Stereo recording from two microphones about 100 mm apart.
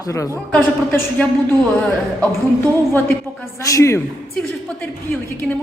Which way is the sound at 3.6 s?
30° left (ahead or behind).